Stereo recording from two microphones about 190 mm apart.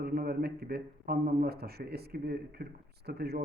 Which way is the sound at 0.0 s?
50° right (ahead or behind).